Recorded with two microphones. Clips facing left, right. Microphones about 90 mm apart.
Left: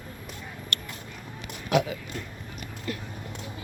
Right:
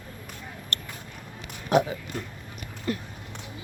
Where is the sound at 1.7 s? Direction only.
35° right (ahead or behind).